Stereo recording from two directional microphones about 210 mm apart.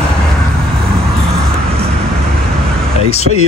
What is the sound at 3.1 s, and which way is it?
Speech, 30° left (ahead or behind).